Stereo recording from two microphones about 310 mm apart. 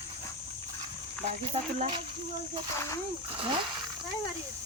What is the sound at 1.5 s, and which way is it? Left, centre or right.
Speech, right.